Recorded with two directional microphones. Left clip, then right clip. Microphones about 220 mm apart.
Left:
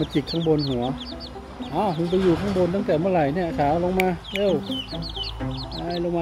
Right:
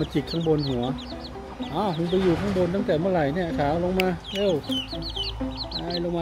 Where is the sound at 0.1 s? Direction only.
5° right (ahead or behind).